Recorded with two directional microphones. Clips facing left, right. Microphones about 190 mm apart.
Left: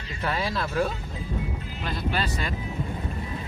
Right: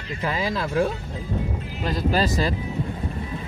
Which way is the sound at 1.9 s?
40° right (ahead or behind).